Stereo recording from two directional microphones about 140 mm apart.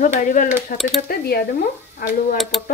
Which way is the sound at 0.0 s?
65° left (ahead or behind).